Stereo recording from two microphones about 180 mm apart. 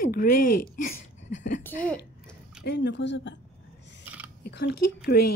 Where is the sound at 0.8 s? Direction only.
45° left (ahead or behind).